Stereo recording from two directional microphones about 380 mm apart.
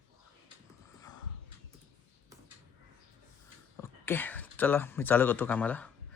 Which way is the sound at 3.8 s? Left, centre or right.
Centre.